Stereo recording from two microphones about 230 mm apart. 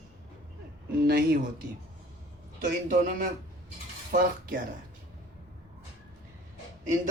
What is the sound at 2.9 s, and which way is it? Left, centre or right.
A man's voice, right.